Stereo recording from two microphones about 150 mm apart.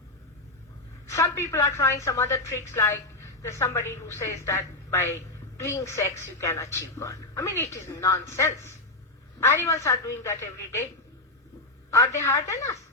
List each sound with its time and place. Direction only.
1.0 s a woman's voice: 20° left (ahead or behind)
11.9 s a woman's voice: 20° left (ahead or behind)